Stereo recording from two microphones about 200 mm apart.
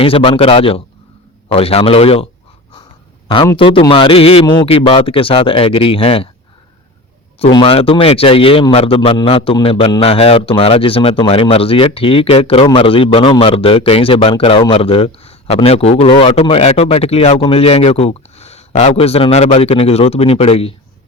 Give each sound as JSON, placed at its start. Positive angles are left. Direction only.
{"t": 0.0, "sound": "speech", "side_deg": 25}
{"t": 3.4, "sound": "speech", "side_deg": 25}
{"t": 7.3, "sound": "speech", "side_deg": 25}